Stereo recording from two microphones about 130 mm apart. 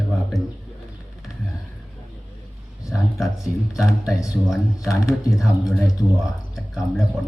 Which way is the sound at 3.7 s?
5° right (ahead or behind).